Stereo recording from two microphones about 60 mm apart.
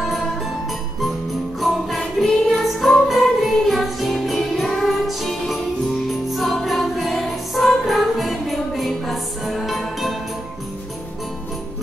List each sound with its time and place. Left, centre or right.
1.6 s music: centre